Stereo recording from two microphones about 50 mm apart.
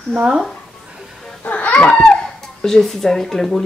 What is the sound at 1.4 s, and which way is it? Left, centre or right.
Baby cry, left.